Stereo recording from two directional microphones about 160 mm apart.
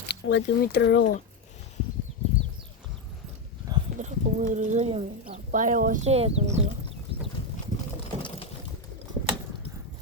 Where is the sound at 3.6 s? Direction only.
20° right (ahead or behind).